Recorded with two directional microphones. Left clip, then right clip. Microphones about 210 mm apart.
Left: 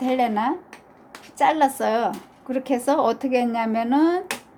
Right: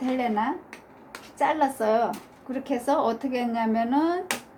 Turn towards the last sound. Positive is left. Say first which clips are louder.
# left 4 dB
turn(degrees=50)  # may be behind; listen again after turning